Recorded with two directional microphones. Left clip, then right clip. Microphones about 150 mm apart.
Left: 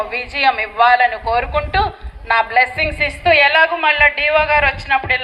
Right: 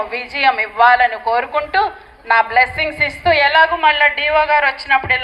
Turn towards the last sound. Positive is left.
turn(degrees=20)  # may be behind; listen again after turning